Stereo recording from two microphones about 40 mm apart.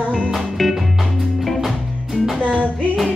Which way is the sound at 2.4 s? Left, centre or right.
Right.